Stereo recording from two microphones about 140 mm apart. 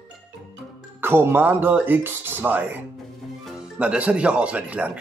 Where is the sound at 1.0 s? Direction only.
15° right (ahead or behind).